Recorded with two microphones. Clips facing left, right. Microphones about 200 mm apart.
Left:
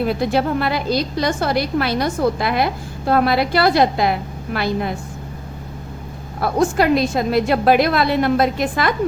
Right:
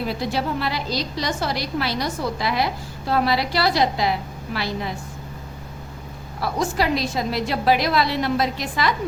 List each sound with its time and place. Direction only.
0.0 s a woman's voice: 55° left (ahead or behind)
6.4 s a woman's voice: 55° left (ahead or behind)